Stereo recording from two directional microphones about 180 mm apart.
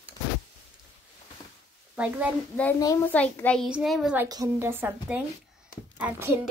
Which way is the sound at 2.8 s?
20° left (ahead or behind).